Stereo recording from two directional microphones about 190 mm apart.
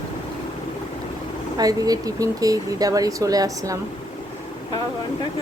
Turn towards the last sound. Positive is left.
turn(degrees=-20)  # may be behind; listen again after turning